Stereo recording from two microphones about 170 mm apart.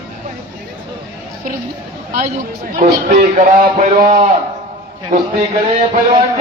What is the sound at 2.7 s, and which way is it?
Speech, 50° right (ahead or behind).